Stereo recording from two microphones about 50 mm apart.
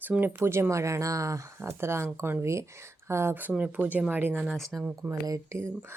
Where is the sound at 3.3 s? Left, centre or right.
Right.